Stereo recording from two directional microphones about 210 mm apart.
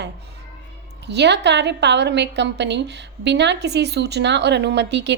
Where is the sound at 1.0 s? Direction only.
55° right (ahead or behind).